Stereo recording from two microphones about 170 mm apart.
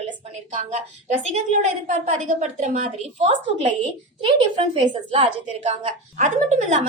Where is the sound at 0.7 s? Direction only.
45° right (ahead or behind).